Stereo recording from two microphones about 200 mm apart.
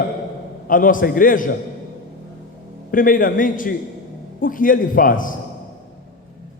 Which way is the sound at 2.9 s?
45° left (ahead or behind).